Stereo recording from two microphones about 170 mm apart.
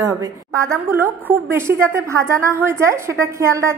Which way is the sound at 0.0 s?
20° right (ahead or behind).